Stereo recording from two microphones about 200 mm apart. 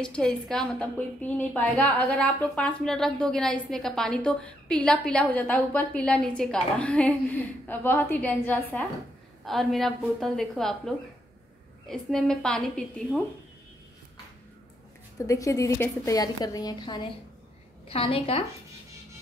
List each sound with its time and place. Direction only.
0.0 s a woman's voice: 5° left (ahead or behind)
15.1 s a woman's voice: 15° left (ahead or behind)